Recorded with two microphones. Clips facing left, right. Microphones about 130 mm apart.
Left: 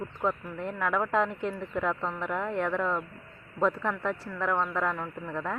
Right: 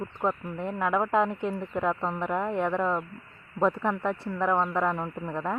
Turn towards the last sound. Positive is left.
turn(degrees=-20)  # may be behind; listen again after turning